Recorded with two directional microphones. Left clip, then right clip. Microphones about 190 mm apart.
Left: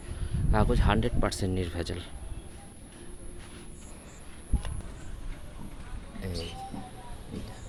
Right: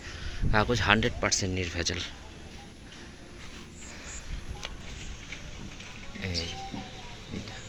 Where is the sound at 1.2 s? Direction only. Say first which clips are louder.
Right 3 dB; 25° left (ahead or behind).